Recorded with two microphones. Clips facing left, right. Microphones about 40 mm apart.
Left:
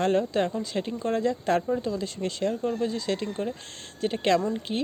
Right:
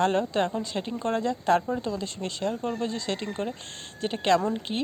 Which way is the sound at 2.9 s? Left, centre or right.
Centre.